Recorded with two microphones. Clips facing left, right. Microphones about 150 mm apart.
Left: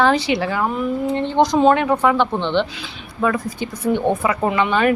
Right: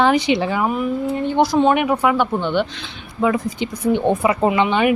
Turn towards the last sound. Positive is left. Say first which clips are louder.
# right 2 dB
turn(degrees=-20)  # may be behind; listen again after turning